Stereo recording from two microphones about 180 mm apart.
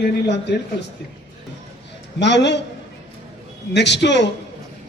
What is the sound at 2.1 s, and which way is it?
Speech, 75° left (ahead or behind).